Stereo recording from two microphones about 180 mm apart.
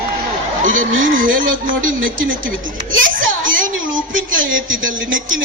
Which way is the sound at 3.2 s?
90° right.